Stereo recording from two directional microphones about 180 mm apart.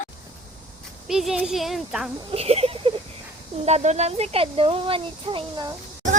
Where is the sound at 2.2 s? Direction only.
30° right (ahead or behind).